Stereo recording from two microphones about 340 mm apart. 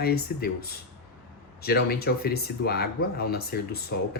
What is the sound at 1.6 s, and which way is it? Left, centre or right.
Speech, left.